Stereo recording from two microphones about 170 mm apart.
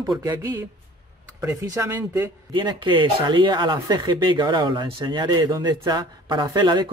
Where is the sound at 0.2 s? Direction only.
20° right (ahead or behind).